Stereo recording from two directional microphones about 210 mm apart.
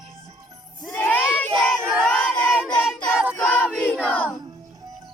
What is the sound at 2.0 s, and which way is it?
Child singing, 5° left (ahead or behind).